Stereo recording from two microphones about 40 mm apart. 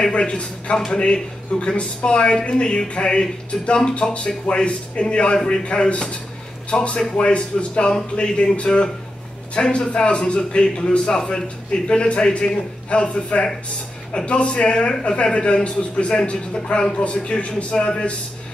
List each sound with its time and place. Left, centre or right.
0.1 s a man's voice: left